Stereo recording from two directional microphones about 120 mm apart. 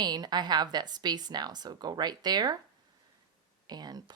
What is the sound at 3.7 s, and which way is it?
Speech, 35° right (ahead or behind).